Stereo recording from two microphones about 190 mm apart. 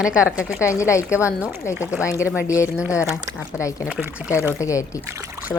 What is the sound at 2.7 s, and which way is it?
Speech, 5° right (ahead or behind).